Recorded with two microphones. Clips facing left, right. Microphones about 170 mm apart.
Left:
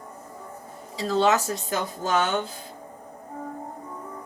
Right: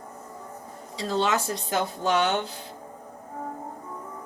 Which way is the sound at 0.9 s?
40° left (ahead or behind).